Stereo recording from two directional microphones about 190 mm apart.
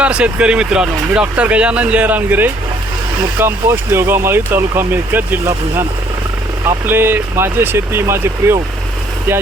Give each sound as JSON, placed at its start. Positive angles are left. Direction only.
{"t": 0.0, "sound": "speech", "side_deg": -5}